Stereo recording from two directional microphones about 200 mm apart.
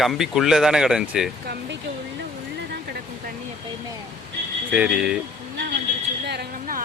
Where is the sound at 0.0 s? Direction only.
Centre (ahead or behind).